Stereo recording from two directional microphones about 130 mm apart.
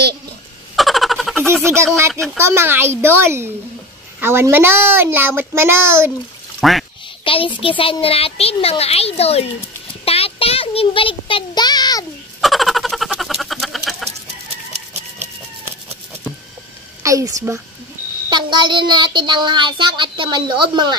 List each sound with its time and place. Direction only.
0.7 s a sound: centre (ahead or behind)
1.4 s a child's voice: 20° right (ahead or behind)
6.6 s speech: centre (ahead or behind)
7.2 s a child's voice: 45° left (ahead or behind)
10.0 s child singing: 50° left (ahead or behind); by 12.1 s 30° left (ahead or behind)
12.4 s bird: centre (ahead or behind)
17.0 s speech: 25° right (ahead or behind)
18.3 s child singing: 35° right (ahead or behind)